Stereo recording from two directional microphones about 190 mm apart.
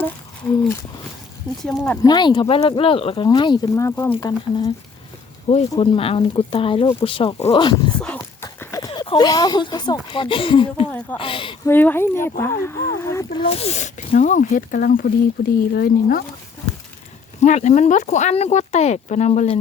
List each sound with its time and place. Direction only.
1.6 s speech: 5° left (ahead or behind)
2.0 s speech: 20° left (ahead or behind)
5.5 s speech: 35° left (ahead or behind)
7.9 s dog: 5° left (ahead or behind)
8.2 s horse: 15° left (ahead or behind)
8.9 s speech: 25° left (ahead or behind)
11.6 s speech: 10° left (ahead or behind)
13.4 s speech: 35° left (ahead or behind); by 16.2 s 55° left (ahead or behind)
17.4 s speech: 40° left (ahead or behind)